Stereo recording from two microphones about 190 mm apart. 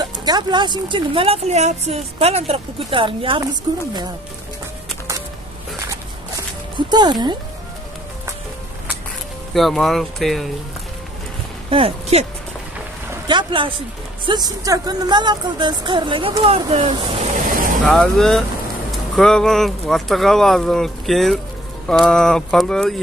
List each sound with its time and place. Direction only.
0.0 s speech: 20° right (ahead or behind)
6.9 s speech: 20° right (ahead or behind)
9.5 s speech: centre (ahead or behind)
11.7 s speech: 30° right (ahead or behind)
13.3 s speech: 25° right (ahead or behind)
17.8 s speech: centre (ahead or behind)